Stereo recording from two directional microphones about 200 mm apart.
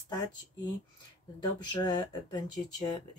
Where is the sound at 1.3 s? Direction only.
20° left (ahead or behind).